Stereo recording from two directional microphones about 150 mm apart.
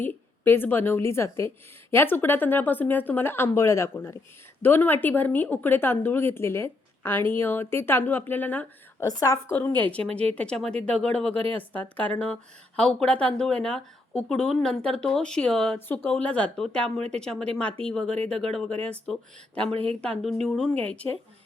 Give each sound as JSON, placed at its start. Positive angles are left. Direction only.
{"t": 0.0, "sound": "a woman's voice", "side_deg": 15}
{"t": 19.7, "sound": "speech", "side_deg": -40}
{"t": 20.0, "sound": "speech", "side_deg": 5}